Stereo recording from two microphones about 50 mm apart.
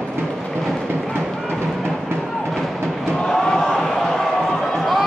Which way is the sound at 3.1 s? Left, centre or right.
Left.